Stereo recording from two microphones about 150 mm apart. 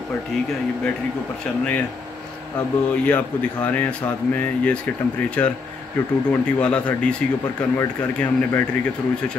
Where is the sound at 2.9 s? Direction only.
10° left (ahead or behind).